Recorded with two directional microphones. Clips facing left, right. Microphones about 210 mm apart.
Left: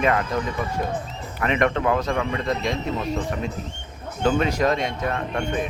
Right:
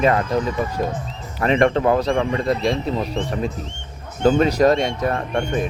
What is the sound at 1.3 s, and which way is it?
A man's voice, 35° right (ahead or behind).